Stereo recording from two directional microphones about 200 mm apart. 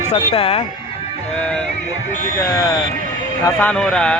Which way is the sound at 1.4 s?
5° left (ahead or behind).